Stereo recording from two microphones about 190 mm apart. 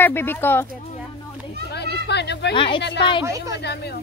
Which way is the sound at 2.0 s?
65° left (ahead or behind).